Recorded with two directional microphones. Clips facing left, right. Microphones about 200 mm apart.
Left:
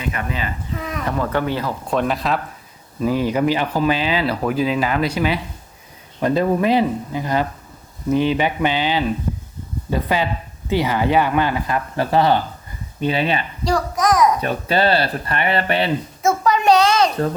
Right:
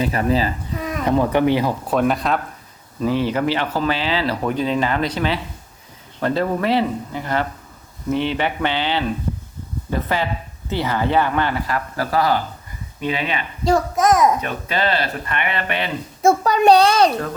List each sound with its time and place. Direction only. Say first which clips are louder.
0.0 s a child's voice: right 7 dB; 35° right (ahead or behind)
1.0 s speech: right 6 dB; 15° right (ahead or behind)
1.9 s speech: even; centre (ahead or behind)
3.0 s speech: left 1 dB; 10° left (ahead or behind); by 13.4 s 35° left (ahead or behind)
13.7 s a child's voice: right 2 dB; 25° right (ahead or behind)
14.4 s speech: left 4 dB; 35° left (ahead or behind)
16.2 s a child's voice: right 3 dB; 35° right (ahead or behind)